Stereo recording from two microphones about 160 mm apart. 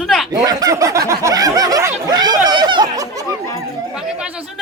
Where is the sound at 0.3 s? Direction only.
20° right (ahead or behind).